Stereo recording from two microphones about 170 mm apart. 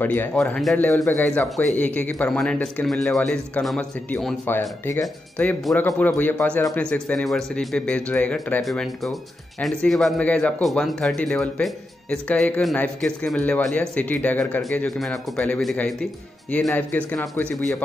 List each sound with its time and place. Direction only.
0.0 s a man's voice: 10° left (ahead or behind)
5.0 s a man's voice: 5° left (ahead or behind)